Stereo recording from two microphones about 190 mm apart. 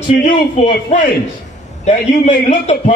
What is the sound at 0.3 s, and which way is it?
Speech, 40° left (ahead or behind).